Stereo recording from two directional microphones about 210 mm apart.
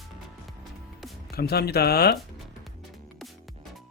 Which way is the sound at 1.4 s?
50° left (ahead or behind).